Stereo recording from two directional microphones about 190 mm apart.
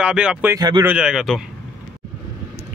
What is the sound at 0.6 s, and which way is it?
Speech, 20° right (ahead or behind).